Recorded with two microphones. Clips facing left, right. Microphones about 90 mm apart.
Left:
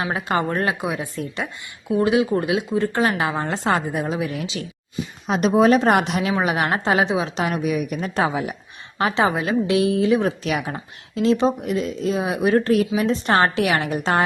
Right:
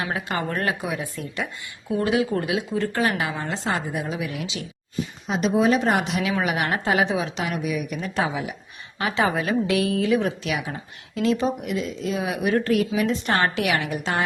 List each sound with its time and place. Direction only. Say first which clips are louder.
0.0 s speech: left 4 dB; 25° left (ahead or behind)
3.5 s a woman's voice: left 5 dB; 50° left (ahead or behind)
5.3 s a woman's voice: left 4 dB; 55° left (ahead or behind)
6.1 s speech: left 3 dB; 35° left (ahead or behind)
7.0 s speech: left 2 dB; 25° left (ahead or behind)
7.3 s a woman's voice: left 4 dB; 40° left (ahead or behind)
9.0 s speech: left 3 dB; 30° left (ahead or behind)
10.2 s speech: left 3 dB; 40° left (ahead or behind)
11.1 s speech: left 4 dB; 30° left (ahead or behind)